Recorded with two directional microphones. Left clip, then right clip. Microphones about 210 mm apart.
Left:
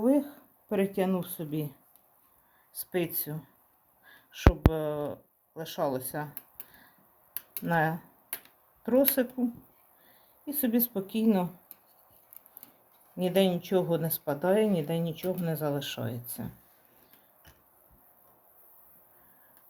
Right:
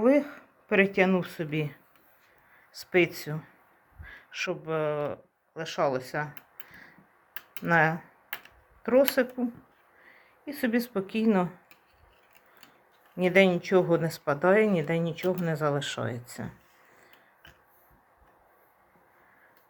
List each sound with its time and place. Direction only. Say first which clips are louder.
0.0 s a sound: right 4 dB; 5° right (ahead or behind)
1.3 s speech: right 4 dB; centre (ahead or behind)
2.7 s speech: right 8 dB; 5° right (ahead or behind)
4.0 s a sound: left 4 dB; centre (ahead or behind)
4.9 s speech: right 3 dB; 5° right (ahead or behind)
7.6 s speech: right 4 dB; 5° right (ahead or behind)
10.4 s speech: right 1 dB; 5° right (ahead or behind)
11.0 s speech: right 2 dB; 30° right (ahead or behind)
13.2 s speech: right 5 dB; 5° right (ahead or behind)